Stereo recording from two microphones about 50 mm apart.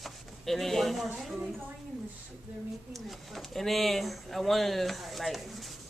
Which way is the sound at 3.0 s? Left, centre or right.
Centre.